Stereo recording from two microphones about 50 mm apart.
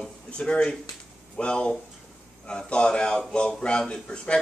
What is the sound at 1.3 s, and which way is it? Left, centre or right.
A man's voice, centre.